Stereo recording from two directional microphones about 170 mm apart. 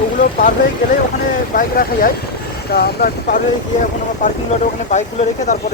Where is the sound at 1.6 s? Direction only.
60° left (ahead or behind).